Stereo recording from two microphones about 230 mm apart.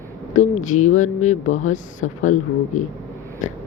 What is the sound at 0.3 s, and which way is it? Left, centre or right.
Speech, left.